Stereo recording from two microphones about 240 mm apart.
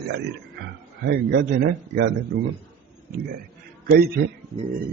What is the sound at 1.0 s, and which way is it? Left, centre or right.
A man's voice, right.